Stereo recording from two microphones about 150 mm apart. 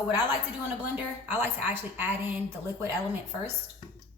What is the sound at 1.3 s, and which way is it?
A woman's voice, 15° right (ahead or behind).